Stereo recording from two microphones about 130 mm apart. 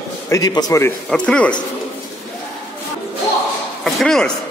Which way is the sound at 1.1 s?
10° left (ahead or behind).